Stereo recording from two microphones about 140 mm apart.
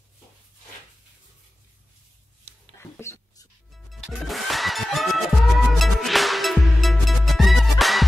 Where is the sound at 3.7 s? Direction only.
Centre (ahead or behind).